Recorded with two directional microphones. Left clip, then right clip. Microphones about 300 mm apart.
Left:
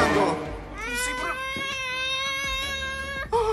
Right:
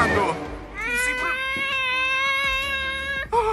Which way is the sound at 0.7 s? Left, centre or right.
Right.